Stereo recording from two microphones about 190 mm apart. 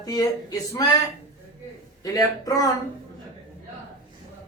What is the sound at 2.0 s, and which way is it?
Speech, 20° left (ahead or behind).